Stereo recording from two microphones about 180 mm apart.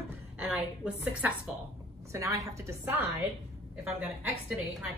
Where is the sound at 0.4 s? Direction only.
5° right (ahead or behind).